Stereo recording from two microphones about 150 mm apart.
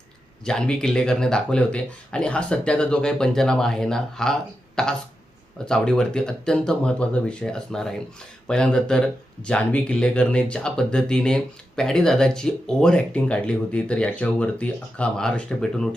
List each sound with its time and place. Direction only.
0.4 s speech: 5° left (ahead or behind)